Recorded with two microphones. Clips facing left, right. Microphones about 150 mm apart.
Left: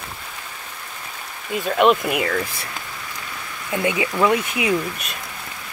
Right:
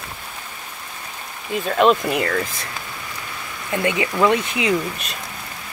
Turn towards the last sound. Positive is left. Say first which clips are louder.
# right 1 dB
turn(degrees=10)  # may be behind; listen again after turning